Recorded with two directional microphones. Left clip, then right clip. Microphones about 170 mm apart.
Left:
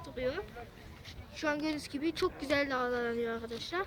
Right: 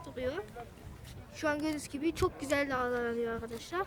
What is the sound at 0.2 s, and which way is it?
A woman's voice, 35° right (ahead or behind).